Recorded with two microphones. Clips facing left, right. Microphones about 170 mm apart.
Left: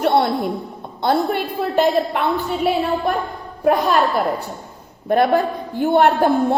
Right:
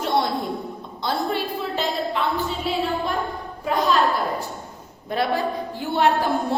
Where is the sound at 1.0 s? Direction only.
55° left (ahead or behind).